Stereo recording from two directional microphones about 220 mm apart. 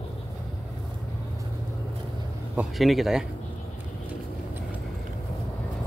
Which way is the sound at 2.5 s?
Centre (ahead or behind).